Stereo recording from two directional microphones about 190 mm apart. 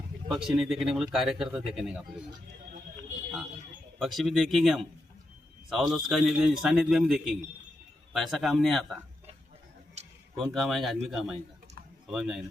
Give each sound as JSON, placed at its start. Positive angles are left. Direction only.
{"t": 0.3, "sound": "speech", "side_deg": 0}
{"t": 3.9, "sound": "speech", "side_deg": 0}
{"t": 10.0, "sound": "a sound", "side_deg": -35}
{"t": 10.3, "sound": "speech", "side_deg": 0}